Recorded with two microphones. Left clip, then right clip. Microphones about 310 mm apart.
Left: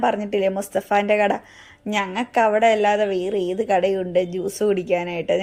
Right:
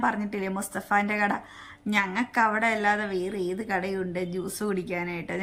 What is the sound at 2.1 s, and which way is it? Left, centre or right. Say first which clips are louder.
A woman's voice: left 10 dB; centre.